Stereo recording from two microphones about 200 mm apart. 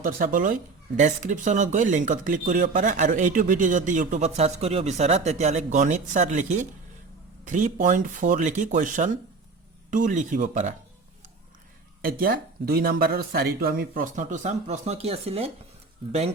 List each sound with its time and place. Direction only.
0.0 s speech: 45° right (ahead or behind)
12.0 s speech: 45° right (ahead or behind); by 15.5 s 30° right (ahead or behind)